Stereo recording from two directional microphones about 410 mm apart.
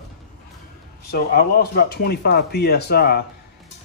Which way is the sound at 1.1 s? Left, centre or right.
Left.